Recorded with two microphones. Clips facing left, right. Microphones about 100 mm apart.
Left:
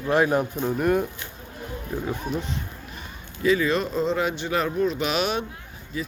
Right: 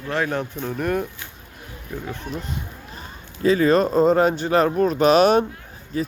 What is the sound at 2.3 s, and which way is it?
Speech, centre (ahead or behind).